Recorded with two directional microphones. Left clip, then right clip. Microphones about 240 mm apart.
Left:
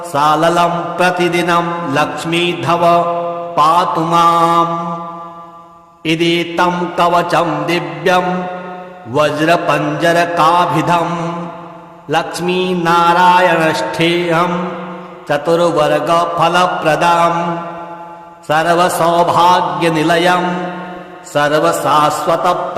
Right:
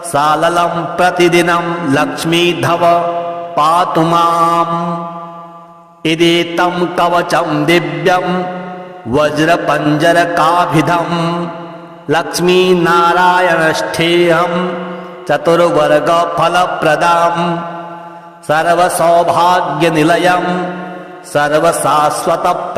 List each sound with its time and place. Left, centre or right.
0.1 s mantra: right
6.0 s mantra: right